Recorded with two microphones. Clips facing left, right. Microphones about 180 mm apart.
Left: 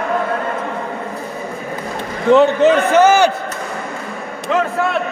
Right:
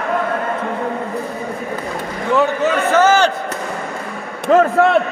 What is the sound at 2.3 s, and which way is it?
Speech, 20° left (ahead or behind).